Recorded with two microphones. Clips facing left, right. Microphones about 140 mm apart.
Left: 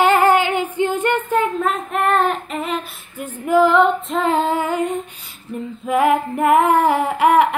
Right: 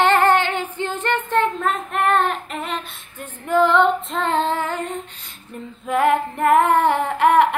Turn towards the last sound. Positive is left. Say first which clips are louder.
# left 1 dB
turn(degrees=0)  # may be behind; listen again after turning